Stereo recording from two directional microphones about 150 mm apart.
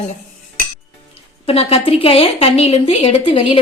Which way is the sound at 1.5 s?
40° left (ahead or behind).